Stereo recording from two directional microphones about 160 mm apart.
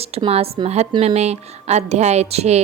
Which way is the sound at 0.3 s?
40° right (ahead or behind).